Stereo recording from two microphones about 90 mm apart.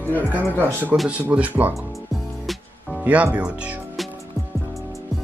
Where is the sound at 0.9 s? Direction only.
15° right (ahead or behind).